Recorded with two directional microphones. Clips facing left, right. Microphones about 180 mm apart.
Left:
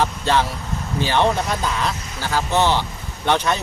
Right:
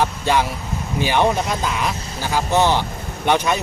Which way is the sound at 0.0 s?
10° right (ahead or behind).